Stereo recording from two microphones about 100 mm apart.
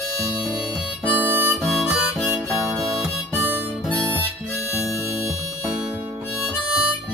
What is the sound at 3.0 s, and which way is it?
Harmonica, 15° right (ahead or behind).